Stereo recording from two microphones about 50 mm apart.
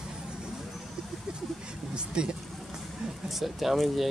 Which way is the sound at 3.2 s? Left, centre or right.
Centre.